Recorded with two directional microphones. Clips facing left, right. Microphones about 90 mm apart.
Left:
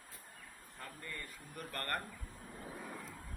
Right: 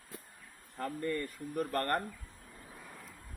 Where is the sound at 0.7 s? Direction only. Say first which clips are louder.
Right 13 dB; 55° right (ahead or behind).